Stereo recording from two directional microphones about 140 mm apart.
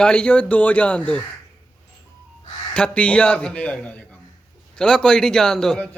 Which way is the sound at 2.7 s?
5° left (ahead or behind).